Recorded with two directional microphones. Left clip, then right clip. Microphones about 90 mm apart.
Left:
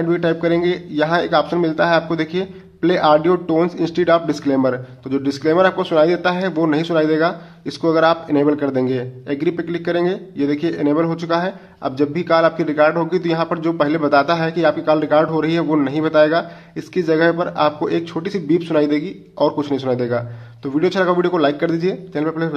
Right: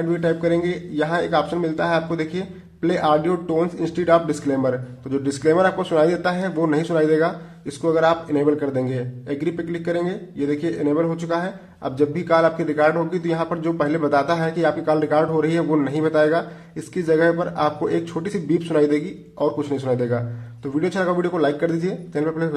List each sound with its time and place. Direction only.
0.0 s a man's voice: 30° left (ahead or behind)
5.1 s speech: 5° left (ahead or behind)
7.8 s a man's voice: 30° left (ahead or behind)
11.8 s a man's voice: 20° left (ahead or behind)
19.6 s a man's voice: 25° left (ahead or behind)